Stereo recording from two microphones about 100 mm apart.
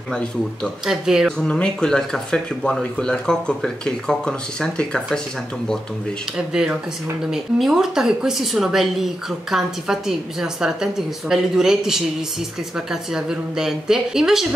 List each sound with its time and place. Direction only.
0.8 s a woman's voice: 5° right (ahead or behind)
1.4 s speech: 10° left (ahead or behind)
6.3 s a woman's voice: 5° right (ahead or behind)